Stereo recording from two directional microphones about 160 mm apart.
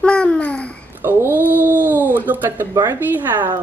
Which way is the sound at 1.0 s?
10° right (ahead or behind).